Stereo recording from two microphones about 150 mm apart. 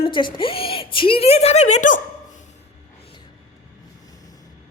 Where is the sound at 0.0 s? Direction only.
35° left (ahead or behind); by 2.4 s 55° left (ahead or behind).